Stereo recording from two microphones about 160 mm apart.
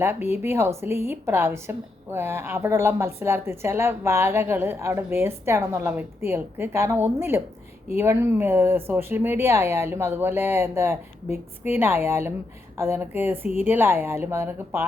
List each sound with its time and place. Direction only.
0.0 s a woman's voice: 15° right (ahead or behind)